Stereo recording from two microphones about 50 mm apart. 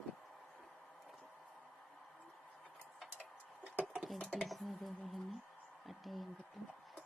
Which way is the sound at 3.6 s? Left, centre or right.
Right.